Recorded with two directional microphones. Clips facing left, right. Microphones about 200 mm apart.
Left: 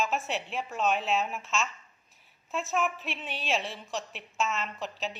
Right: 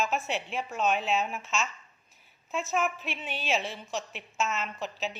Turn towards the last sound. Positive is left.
turn(degrees=0)  # may be behind; listen again after turning